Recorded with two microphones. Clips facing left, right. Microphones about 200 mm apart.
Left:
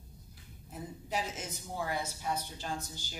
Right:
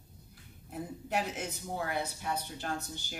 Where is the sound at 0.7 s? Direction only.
60° right (ahead or behind).